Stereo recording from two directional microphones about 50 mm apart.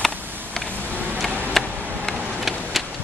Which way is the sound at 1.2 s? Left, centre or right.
Centre.